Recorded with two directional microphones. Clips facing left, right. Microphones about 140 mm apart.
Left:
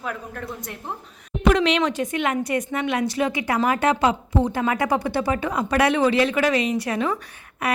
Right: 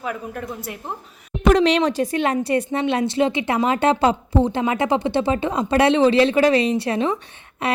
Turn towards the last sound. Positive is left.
turn(degrees=-25)  # may be behind; listen again after turning